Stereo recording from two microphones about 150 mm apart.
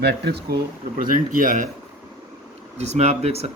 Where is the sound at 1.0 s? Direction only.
65° right (ahead or behind).